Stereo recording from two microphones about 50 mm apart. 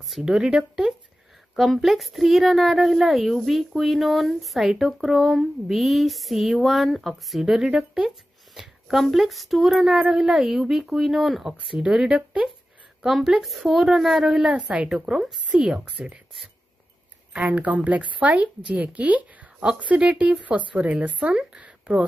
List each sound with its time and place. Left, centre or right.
0.1 s speech: centre
14.6 s a woman's voice: right
17.3 s a woman's voice: right